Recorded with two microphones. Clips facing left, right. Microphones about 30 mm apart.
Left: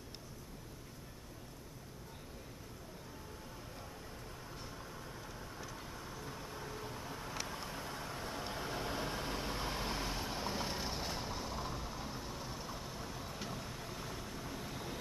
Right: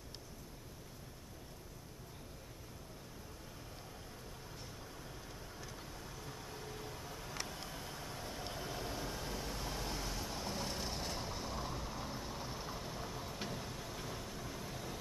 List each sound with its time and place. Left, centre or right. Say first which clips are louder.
6.4 s vehicle: left 2 dB; left; by 13.3 s centre
13.9 s vehicle: even; centre
14.2 s vehicle: left 1 dB; centre
14.7 s vehicle: left 1 dB; left